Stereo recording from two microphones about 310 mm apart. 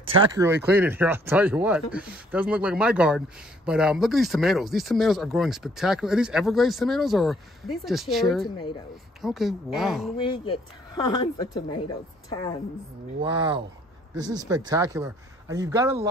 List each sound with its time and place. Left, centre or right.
0.1 s speech: centre
8.5 s a woman's voice: centre
9.2 s speech: centre
10.1 s a woman's voice: centre
13.2 s speech: centre